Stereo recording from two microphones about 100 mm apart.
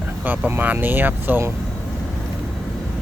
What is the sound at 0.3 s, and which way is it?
Speech, 20° right (ahead or behind).